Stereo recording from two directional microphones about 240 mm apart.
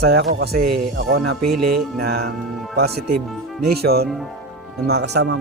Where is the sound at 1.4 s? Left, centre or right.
Right.